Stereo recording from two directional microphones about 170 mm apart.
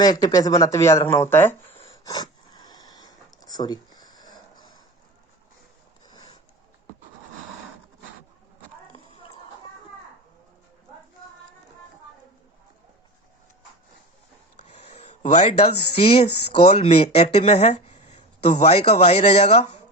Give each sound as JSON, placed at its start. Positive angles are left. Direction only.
{"t": 0.0, "sound": "speech", "side_deg": 20}
{"t": 1.9, "sound": "sniff", "side_deg": 20}
{"t": 14.7, "sound": "speech", "side_deg": 40}